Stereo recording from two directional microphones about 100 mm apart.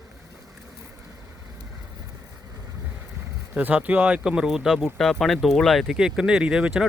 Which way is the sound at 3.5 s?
15° right (ahead or behind).